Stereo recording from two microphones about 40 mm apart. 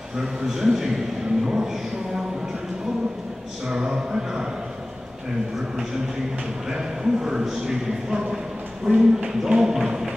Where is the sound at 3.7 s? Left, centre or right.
Centre.